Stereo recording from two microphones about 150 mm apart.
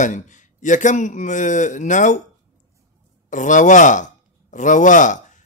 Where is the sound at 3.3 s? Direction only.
55° left (ahead or behind).